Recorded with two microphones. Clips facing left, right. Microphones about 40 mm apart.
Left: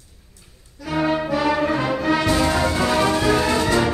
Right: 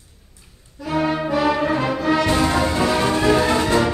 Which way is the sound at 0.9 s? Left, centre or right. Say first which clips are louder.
Even; centre.